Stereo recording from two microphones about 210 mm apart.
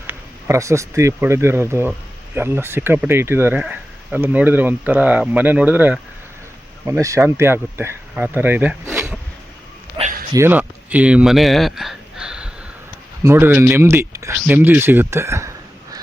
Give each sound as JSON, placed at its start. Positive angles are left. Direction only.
{"t": 0.1, "sound": "speech", "side_deg": -15}
{"t": 10.0, "sound": "a sound", "side_deg": -40}
{"t": 10.3, "sound": "speech", "side_deg": -10}